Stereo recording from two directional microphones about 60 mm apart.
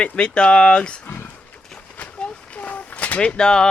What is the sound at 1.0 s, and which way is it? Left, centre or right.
Speech, left.